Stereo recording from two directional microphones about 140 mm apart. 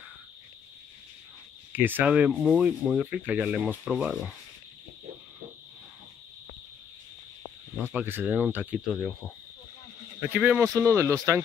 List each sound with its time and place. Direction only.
1.7 s speech: 15° right (ahead or behind)
7.9 s speech: 15° right (ahead or behind)
8.8 s cricket: 5° left (ahead or behind)
10.3 s speech: 15° right (ahead or behind)